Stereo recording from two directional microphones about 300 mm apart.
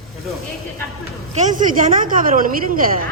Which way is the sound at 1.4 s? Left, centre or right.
Right.